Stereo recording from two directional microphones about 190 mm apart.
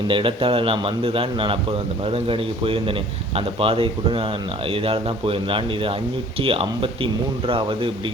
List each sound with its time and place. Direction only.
0.1 s speech: 25° right (ahead or behind)